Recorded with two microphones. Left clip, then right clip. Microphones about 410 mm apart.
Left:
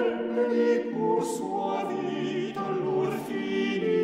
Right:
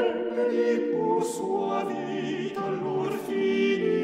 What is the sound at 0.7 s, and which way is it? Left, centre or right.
Music, right.